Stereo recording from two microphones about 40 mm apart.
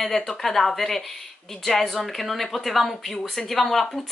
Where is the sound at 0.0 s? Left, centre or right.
Centre.